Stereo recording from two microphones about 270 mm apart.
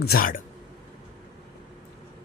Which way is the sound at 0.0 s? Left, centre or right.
Left.